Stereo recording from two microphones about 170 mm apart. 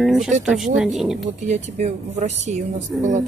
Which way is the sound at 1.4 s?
45° right (ahead or behind).